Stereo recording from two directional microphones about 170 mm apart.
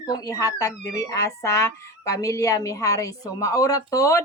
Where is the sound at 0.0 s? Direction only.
20° left (ahead or behind).